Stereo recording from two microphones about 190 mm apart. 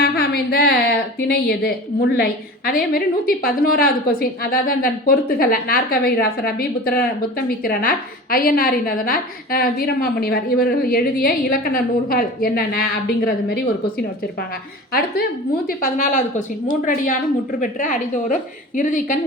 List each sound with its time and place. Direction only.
0.0 s a sound: 55° left (ahead or behind)
2.1 s a woman's voice: 50° left (ahead or behind)
15.6 s a woman's voice: 40° left (ahead or behind)